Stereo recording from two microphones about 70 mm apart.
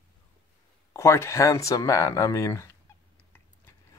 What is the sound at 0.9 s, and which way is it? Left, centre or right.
Speech, left.